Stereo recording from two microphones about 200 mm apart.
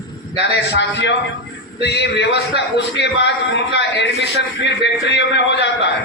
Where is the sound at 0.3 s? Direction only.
60° left (ahead or behind).